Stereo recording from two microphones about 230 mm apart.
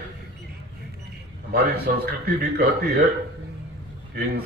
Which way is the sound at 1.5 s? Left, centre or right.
Right.